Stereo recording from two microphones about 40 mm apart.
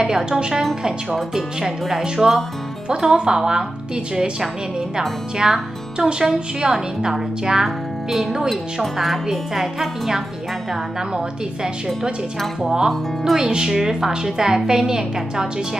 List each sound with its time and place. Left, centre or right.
0.0 s speech: centre
2.2 s speech: centre
7.6 s a woman's voice: centre
10.7 s speech: centre